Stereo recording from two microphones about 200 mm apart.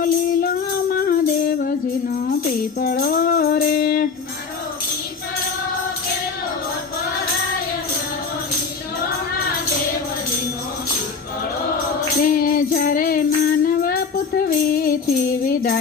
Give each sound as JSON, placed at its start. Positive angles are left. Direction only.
{"t": 0.0, "sound": "music", "side_deg": 45}
{"t": 2.8, "sound": "music", "side_deg": 45}
{"t": 12.2, "sound": "music", "side_deg": 45}